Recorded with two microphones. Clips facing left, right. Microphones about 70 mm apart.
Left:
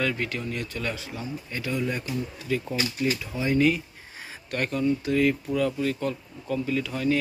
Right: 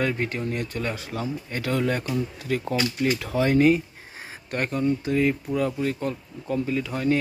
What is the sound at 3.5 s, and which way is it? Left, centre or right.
Speech, right.